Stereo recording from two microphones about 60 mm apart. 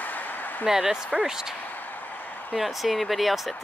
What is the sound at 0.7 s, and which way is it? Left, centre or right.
Speech, centre.